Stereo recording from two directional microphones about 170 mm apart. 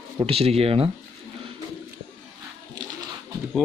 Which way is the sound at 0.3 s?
35° right (ahead or behind).